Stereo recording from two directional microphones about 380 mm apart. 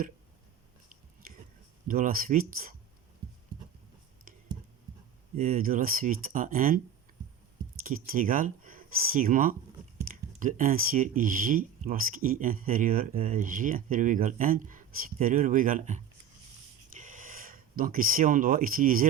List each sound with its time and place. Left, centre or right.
1.9 s speech: right
5.4 s speech: right
7.9 s speech: right
17.0 s speech: right